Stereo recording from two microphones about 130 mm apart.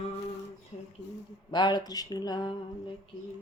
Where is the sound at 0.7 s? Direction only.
55° left (ahead or behind).